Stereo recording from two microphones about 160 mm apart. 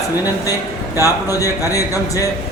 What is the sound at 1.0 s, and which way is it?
Speech, 20° left (ahead or behind).